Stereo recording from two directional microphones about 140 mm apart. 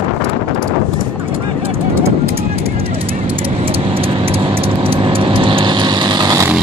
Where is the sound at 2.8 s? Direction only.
40° right (ahead or behind).